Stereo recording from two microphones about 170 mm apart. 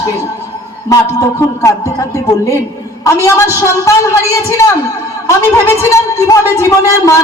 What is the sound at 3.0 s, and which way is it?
A man's voice, 20° left (ahead or behind).